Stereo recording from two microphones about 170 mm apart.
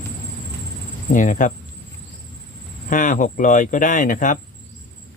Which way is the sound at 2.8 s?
50° left (ahead or behind).